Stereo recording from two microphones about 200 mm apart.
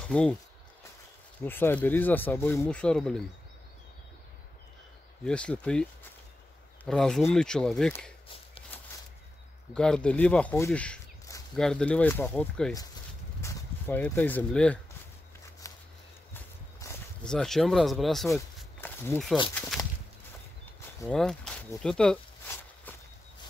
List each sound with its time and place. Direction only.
0.1 s speech: 5° left (ahead or behind)
1.4 s speech: 10° left (ahead or behind)
5.2 s speech: 5° left (ahead or behind)
9.8 s speech: 5° left (ahead or behind)
15.7 s walk: 15° left (ahead or behind)
16.3 s a sound: 5° left (ahead or behind)
19.1 s speech: 10° left (ahead or behind)
21.1 s a sound: 5° left (ahead or behind)